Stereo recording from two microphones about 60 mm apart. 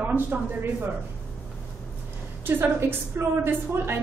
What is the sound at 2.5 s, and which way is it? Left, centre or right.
A woman's voice, right.